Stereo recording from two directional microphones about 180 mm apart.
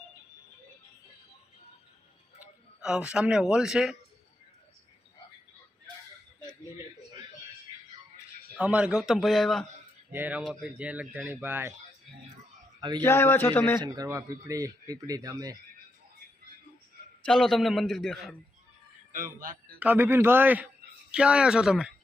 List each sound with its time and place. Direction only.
2.4 s speech: 5° right (ahead or behind)
8.5 s a man's voice: 5° right (ahead or behind)
10.1 s speech: 10° right (ahead or behind)
13.0 s a man's voice: 15° left (ahead or behind)
13.8 s speech: 20° right (ahead or behind)
17.2 s a man's voice: 5° left (ahead or behind)
19.1 s a man's voice: 50° right (ahead or behind)
19.8 s a man's voice: 10° right (ahead or behind)